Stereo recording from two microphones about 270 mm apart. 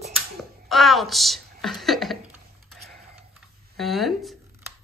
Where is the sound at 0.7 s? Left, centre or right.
Centre.